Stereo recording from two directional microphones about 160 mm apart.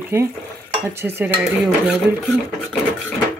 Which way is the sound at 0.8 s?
15° right (ahead or behind).